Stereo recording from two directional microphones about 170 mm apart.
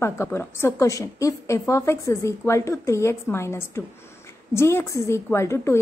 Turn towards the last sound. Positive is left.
turn(degrees=15)  # may be behind; listen again after turning